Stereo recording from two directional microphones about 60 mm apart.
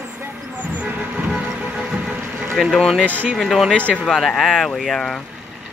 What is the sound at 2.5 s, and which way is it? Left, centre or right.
Speech, centre.